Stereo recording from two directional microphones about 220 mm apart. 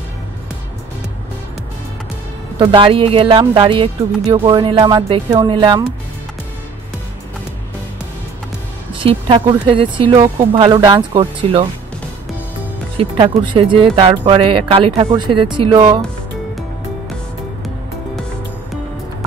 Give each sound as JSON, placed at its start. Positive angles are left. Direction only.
{"t": 2.6, "sound": "speech", "side_deg": -25}
{"t": 8.9, "sound": "speech", "side_deg": -25}
{"t": 12.9, "sound": "speech", "side_deg": -20}